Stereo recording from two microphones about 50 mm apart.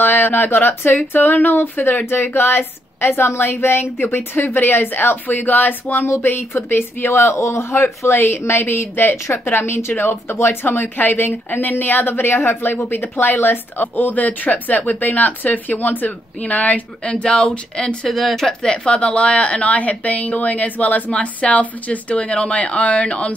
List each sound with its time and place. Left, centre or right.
0.0 s speech: left
6.0 s speech: left
8.2 s speech: left; by 17.9 s centre
18.0 s speech: centre; by 23.3 s left